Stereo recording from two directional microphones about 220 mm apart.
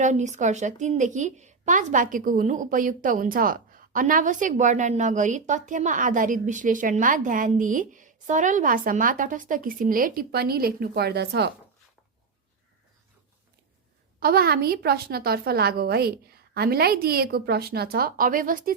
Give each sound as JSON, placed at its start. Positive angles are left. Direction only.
{"t": 0.0, "sound": "a woman's voice", "side_deg": -35}
{"t": 14.2, "sound": "a woman's voice", "side_deg": -45}